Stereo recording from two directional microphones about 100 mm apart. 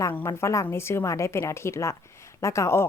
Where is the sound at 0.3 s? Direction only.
30° left (ahead or behind).